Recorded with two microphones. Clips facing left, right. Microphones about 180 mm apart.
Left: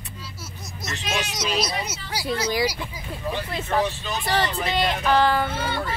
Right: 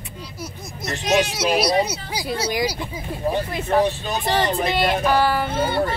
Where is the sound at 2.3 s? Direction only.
25° right (ahead or behind).